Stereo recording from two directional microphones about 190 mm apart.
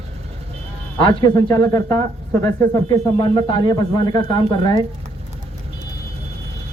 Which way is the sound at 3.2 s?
25° left (ahead or behind).